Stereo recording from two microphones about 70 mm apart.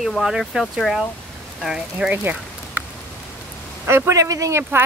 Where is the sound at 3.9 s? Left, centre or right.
Right.